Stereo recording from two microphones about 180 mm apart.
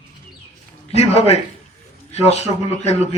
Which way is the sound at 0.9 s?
35° left (ahead or behind).